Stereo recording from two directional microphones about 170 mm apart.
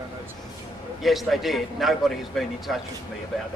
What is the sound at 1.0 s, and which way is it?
A man's voice, centre (ahead or behind).